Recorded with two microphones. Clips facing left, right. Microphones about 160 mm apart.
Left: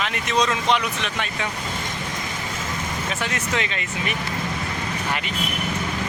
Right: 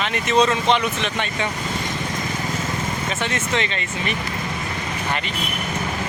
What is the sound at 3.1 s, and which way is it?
Speech, centre (ahead or behind).